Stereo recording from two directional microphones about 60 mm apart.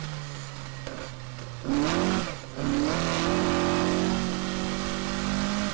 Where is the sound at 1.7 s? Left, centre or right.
Right.